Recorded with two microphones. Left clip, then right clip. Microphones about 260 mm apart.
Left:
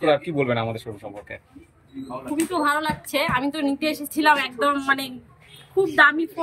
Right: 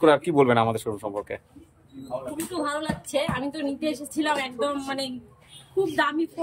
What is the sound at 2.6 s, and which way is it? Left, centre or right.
A woman's voice, centre.